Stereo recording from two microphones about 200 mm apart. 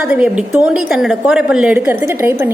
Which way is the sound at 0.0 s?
5° right (ahead or behind).